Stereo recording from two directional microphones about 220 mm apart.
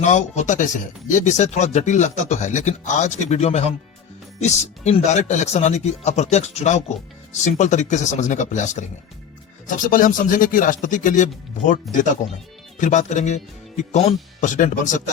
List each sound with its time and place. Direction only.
0.0 s speech: 30° left (ahead or behind)